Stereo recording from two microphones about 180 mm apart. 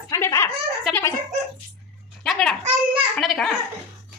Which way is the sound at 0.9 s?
15° left (ahead or behind).